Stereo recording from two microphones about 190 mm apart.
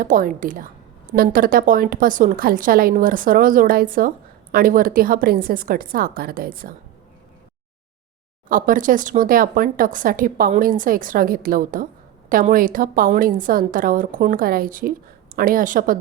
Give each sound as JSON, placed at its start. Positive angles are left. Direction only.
{"t": 0.0, "sound": "a woman's voice", "side_deg": -45}
{"t": 8.4, "sound": "a woman's voice", "side_deg": -45}